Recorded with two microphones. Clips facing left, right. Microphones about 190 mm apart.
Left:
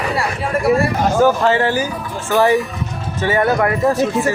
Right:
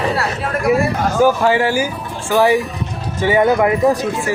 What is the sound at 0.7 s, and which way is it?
Speech, centre (ahead or behind).